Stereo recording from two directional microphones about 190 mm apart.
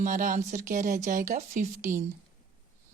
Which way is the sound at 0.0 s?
40° right (ahead or behind).